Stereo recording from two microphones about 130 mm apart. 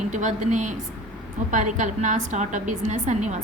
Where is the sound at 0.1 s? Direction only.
70° right (ahead or behind).